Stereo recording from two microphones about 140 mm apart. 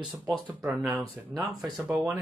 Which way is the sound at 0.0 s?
10° right (ahead or behind).